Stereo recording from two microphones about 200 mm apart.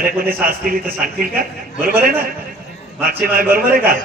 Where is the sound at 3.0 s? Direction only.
45° right (ahead or behind).